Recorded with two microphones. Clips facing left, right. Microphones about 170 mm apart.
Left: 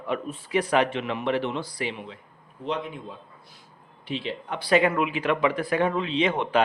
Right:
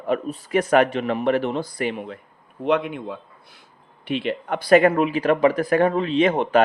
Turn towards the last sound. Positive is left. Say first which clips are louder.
# right 5 dB
turn(degrees=-45)  # may be behind; listen again after turning